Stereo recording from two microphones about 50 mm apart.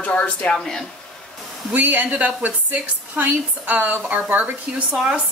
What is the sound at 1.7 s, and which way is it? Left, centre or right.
A woman's voice, right.